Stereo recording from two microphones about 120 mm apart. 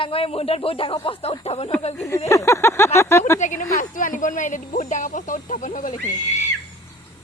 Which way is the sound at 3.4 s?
90° left.